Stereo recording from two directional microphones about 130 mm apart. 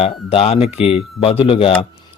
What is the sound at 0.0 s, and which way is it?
Speech, 50° left (ahead or behind).